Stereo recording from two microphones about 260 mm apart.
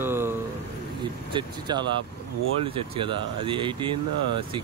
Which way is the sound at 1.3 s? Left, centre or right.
Centre.